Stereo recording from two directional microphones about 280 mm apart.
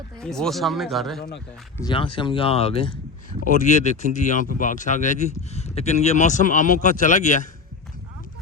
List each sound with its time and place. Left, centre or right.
0.2 s speech: centre
1.8 s speech: centre